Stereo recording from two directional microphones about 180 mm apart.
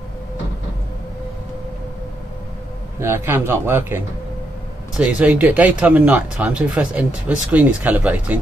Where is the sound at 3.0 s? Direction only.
15° right (ahead or behind).